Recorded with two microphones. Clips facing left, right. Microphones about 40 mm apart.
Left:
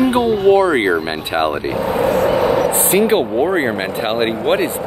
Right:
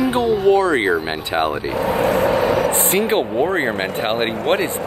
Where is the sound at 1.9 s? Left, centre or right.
Right.